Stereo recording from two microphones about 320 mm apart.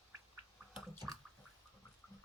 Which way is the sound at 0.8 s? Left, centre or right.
Centre.